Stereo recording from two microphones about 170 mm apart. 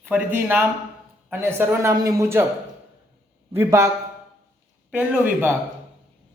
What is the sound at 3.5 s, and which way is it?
Speech, 15° right (ahead or behind).